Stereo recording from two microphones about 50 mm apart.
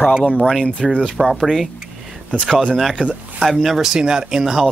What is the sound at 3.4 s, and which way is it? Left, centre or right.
Speech, centre.